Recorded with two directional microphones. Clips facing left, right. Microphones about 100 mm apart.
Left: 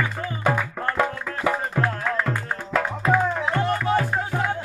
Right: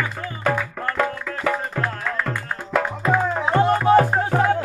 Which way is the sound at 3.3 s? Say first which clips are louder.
Right 5 dB; 25° right (ahead or behind).